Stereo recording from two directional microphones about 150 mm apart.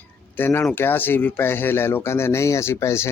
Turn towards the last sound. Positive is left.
turn(degrees=20)  # may be behind; listen again after turning